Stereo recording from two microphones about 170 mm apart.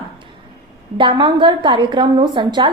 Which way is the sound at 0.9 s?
30° right (ahead or behind).